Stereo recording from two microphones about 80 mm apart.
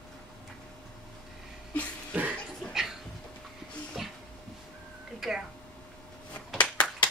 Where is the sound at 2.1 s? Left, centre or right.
Centre.